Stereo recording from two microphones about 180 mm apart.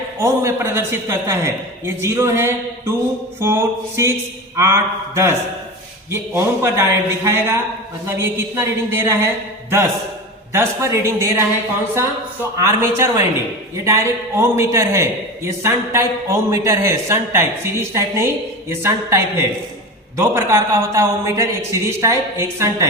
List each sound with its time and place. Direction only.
0.2 s a man's voice: 15° right (ahead or behind)
12.5 s a man's voice: 15° right (ahead or behind)